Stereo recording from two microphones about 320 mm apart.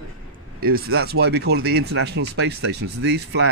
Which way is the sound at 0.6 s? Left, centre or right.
Right.